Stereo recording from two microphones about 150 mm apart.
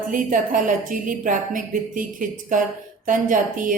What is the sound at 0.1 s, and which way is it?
A woman's voice, 60° right (ahead or behind).